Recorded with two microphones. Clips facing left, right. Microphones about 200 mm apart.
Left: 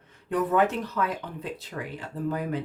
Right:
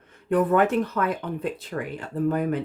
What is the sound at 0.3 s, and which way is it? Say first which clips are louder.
Speech: right 4 dB; 55° right (ahead or behind).